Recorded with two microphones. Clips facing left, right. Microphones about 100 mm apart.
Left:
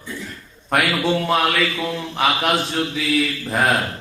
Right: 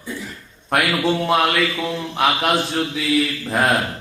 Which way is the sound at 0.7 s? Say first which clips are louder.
Even; centre (ahead or behind).